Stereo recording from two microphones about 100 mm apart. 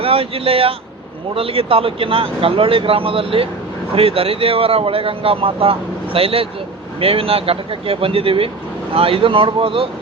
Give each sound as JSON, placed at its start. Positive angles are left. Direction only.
{"t": 0.0, "sound": "speech", "side_deg": -70}